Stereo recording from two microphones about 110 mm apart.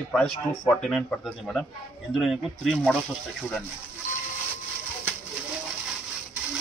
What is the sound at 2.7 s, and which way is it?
Speech, 10° left (ahead or behind).